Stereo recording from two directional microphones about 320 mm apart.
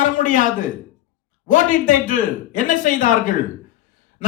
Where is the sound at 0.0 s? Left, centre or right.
Left.